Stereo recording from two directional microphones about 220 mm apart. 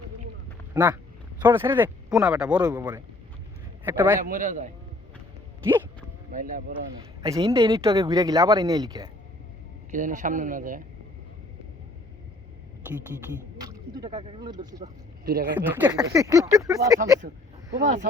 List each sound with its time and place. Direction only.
0.7 s speech: 15° right (ahead or behind)
2.6 s speech: 15° right (ahead or behind)
3.8 s speech: 10° right (ahead or behind)
4.2 s a man's voice: 35° right (ahead or behind)
6.3 s a man's voice: 40° right (ahead or behind)
7.2 s speech: 15° right (ahead or behind)
9.9 s a man's voice: 35° right (ahead or behind)
13.6 s speech: 15° right (ahead or behind)
15.2 s speech: 40° right (ahead or behind)
15.5 s speech: 10° right (ahead or behind)